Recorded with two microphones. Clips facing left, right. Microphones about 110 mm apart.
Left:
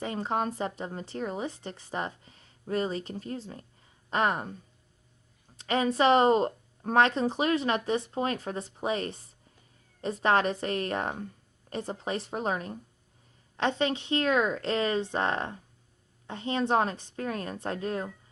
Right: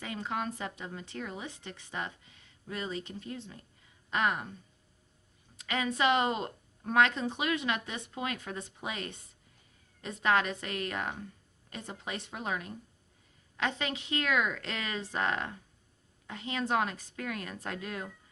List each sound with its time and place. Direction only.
0.0 s a woman's voice: 35° left (ahead or behind)